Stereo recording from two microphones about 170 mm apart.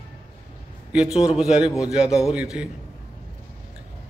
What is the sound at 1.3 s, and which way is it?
Mantra, 5° right (ahead or behind).